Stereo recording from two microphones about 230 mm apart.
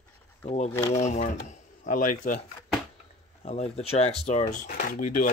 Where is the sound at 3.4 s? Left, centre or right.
Left.